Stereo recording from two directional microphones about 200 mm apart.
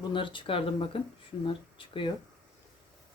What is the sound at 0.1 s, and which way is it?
Speech, 25° left (ahead or behind).